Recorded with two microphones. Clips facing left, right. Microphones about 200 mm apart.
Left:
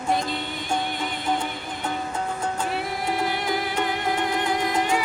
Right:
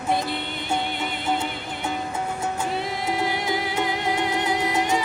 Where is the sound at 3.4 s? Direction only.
10° right (ahead or behind).